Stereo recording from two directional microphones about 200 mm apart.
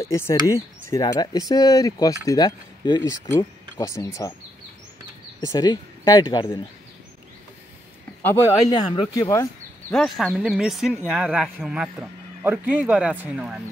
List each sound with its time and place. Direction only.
0.1 s speech: 15° left (ahead or behind)
5.4 s speech: 20° left (ahead or behind)
8.2 s speech: 10° left (ahead or behind)
9.9 s a man's voice: centre (ahead or behind)